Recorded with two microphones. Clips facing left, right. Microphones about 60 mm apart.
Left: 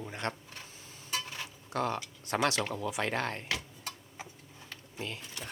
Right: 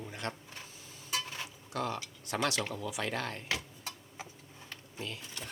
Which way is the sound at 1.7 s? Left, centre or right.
Left.